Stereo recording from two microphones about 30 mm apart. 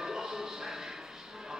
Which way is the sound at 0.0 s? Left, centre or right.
Centre.